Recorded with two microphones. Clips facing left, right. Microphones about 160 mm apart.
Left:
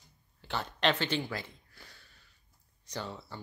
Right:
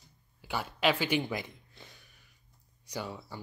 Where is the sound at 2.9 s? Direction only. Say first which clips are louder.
Right 1 dB; 10° right (ahead or behind).